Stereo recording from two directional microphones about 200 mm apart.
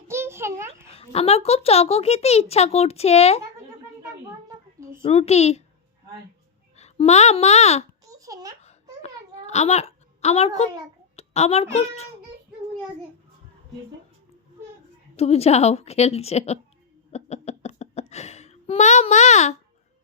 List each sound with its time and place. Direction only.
0.1 s a sound: 10° right (ahead or behind)
0.9 s a child's voice: 30° left (ahead or behind)
5.0 s a child's voice: 30° left (ahead or behind)
6.7 s a child's voice: 35° left (ahead or behind)
8.2 s a child's voice: 15° right (ahead or behind)
8.6 s a sound: 35° left (ahead or behind)
11.2 s a child's voice: 30° left (ahead or behind)
15.1 s a child's voice: 30° left (ahead or behind)
17.1 s a sound: 35° left (ahead or behind)